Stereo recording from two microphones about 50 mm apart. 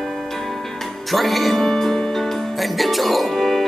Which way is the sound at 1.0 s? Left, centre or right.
Centre.